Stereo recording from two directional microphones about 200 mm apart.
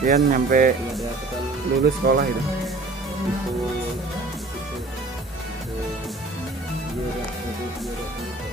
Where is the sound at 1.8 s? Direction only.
50° right (ahead or behind).